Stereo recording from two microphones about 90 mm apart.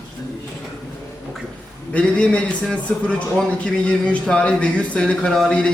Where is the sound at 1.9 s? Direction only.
10° left (ahead or behind).